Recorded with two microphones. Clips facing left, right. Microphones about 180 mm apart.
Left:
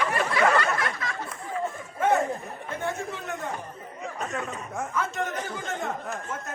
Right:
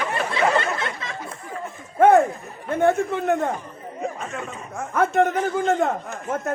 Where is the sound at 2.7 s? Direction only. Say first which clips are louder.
Right 13 dB; 55° right (ahead or behind).